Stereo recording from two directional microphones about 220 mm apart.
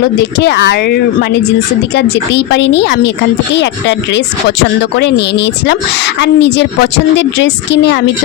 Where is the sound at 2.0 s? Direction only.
50° left (ahead or behind).